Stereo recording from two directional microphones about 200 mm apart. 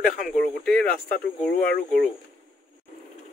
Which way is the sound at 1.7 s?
50° left (ahead or behind).